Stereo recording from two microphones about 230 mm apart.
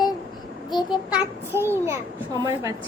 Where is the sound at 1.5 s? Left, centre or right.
Centre.